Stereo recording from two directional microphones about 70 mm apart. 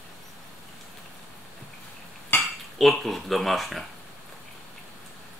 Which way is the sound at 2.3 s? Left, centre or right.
Left.